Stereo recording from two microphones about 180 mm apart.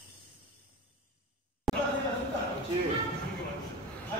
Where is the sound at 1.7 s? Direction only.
Centre (ahead or behind).